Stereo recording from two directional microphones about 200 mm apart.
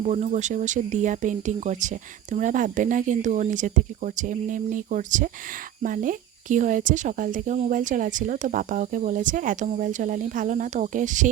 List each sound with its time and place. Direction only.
0.0 s speech: 35° right (ahead or behind)